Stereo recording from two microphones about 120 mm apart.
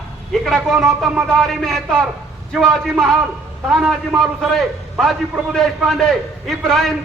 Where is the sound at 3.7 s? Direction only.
Centre (ahead or behind).